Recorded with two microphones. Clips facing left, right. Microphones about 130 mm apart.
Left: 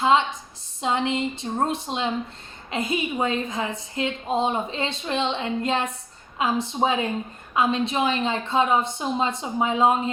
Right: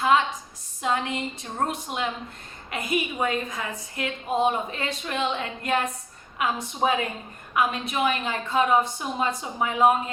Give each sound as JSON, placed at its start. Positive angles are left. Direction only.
{"t": 0.0, "sound": "a woman's voice", "side_deg": 25}